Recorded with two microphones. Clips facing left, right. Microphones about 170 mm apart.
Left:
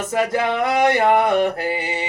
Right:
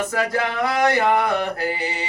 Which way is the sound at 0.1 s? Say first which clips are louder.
Left 3 dB; 25° left (ahead or behind).